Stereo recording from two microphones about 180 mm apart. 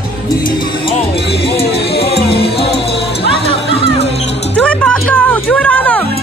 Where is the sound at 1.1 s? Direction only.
65° left (ahead or behind).